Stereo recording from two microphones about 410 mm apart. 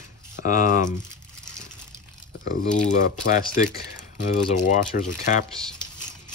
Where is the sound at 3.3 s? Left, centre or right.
Centre.